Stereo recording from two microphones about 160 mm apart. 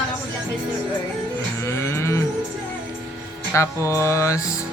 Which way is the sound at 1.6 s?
20° left (ahead or behind).